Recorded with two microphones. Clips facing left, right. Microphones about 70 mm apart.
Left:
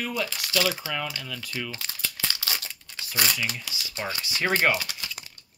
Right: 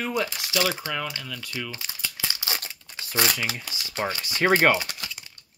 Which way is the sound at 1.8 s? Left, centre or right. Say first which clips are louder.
Even; centre.